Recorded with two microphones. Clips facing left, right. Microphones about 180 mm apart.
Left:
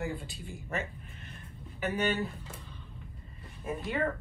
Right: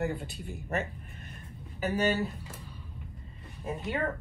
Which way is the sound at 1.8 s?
35° right (ahead or behind).